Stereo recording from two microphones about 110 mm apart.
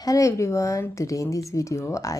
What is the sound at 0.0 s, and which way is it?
Speech, 30° left (ahead or behind).